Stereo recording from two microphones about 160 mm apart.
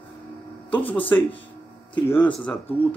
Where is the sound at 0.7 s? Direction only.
10° left (ahead or behind).